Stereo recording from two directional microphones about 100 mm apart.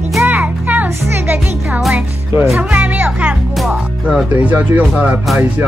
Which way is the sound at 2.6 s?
15° right (ahead or behind).